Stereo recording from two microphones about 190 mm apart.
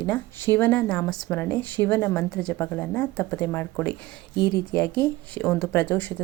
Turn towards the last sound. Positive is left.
turn(degrees=10)  # may be behind; listen again after turning